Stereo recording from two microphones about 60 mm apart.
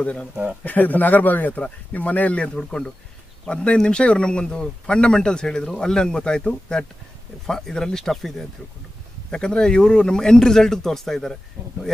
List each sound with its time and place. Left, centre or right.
0.0 s speech: left; by 11.3 s centre